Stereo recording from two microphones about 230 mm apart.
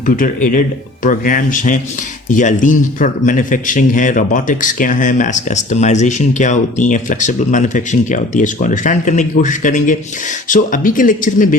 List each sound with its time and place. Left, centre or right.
0.0 s speech: left